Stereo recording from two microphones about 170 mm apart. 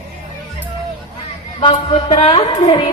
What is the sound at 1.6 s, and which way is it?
Music, 30° left (ahead or behind).